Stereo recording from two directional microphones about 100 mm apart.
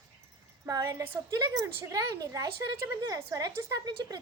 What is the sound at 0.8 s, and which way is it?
A woman's voice, 25° right (ahead or behind).